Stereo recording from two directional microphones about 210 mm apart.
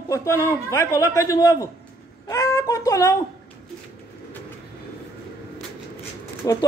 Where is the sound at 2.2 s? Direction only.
15° left (ahead or behind).